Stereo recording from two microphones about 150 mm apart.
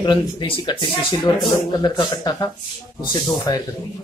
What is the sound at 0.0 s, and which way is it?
Speech, 30° left (ahead or behind).